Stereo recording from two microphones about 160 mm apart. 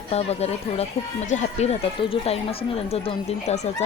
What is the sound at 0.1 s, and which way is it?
A woman's voice, 40° left (ahead or behind).